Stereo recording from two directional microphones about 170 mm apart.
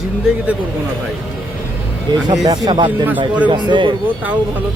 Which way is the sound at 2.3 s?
25° right (ahead or behind).